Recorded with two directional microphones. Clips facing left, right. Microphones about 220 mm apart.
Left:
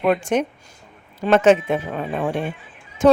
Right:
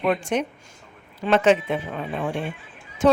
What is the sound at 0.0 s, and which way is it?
Speech, 50° left (ahead or behind).